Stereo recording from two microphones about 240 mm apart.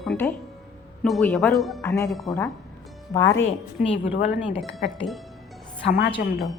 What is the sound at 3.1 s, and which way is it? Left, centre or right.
Speech, centre.